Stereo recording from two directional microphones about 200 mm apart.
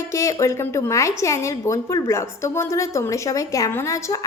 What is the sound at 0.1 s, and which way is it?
A woman's voice, 15° left (ahead or behind).